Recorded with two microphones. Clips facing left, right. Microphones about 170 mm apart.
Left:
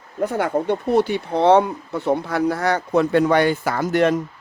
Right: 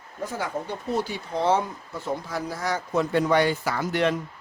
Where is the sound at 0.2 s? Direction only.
60° left (ahead or behind).